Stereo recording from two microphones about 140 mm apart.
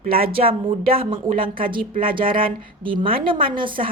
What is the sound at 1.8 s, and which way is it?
Speech, 90° right.